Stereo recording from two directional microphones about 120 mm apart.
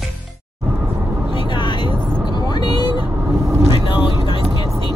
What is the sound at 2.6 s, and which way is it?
Vehicle, 35° left (ahead or behind).